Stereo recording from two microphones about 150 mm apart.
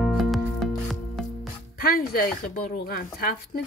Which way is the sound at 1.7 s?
90° left.